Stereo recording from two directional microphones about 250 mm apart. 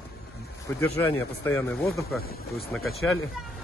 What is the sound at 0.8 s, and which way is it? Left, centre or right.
Speech, centre.